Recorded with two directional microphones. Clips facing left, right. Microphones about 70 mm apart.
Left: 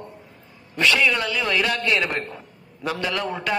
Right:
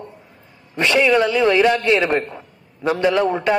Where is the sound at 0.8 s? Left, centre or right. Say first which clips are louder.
Right 5 dB; right.